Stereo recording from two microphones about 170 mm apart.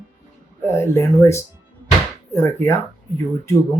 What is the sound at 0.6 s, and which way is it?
Speech, 15° left (ahead or behind).